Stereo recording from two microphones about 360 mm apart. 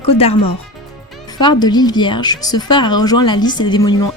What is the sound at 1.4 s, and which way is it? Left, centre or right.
Speech, centre.